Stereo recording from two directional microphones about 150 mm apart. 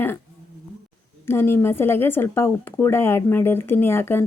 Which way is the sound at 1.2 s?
15° left (ahead or behind).